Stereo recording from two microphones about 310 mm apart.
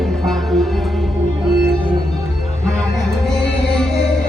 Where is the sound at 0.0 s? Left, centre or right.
Centre.